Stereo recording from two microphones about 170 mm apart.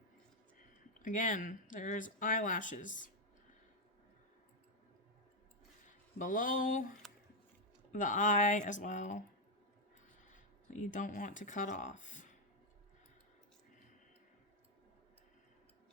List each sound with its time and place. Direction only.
1.0 s speech: 50° left (ahead or behind)
6.1 s speech: 50° left (ahead or behind)
7.0 s a sound: centre (ahead or behind)
7.9 s speech: 50° left (ahead or behind)
10.2 s speech: 45° left (ahead or behind)